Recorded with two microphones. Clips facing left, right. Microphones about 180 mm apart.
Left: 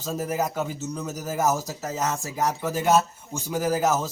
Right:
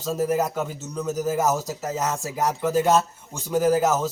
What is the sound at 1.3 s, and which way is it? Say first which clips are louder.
Speech: right 1 dB; 10° right (ahead or behind).